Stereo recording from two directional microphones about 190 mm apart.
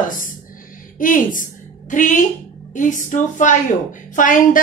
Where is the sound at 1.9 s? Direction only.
40° left (ahead or behind).